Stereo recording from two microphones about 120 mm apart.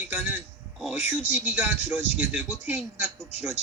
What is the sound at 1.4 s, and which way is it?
A man's voice, 20° right (ahead or behind).